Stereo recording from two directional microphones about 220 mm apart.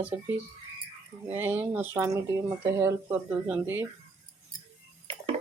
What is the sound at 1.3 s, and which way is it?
Speech, 10° right (ahead or behind).